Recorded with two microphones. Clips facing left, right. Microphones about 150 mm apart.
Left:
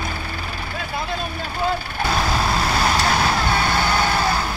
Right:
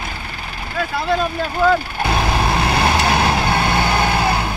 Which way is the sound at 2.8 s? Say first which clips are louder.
Right 2 dB; 20° right (ahead or behind).